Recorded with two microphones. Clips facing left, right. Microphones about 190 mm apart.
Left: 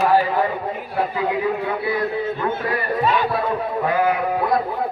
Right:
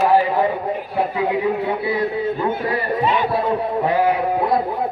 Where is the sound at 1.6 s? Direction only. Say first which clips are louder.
Right 2 dB; 20° right (ahead or behind).